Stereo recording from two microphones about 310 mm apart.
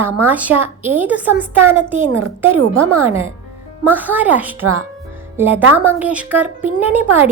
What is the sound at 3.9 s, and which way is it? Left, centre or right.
Speech, centre.